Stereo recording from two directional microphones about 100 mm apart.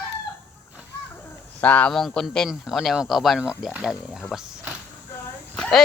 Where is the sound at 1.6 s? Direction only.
15° left (ahead or behind); by 4.2 s 5° right (ahead or behind).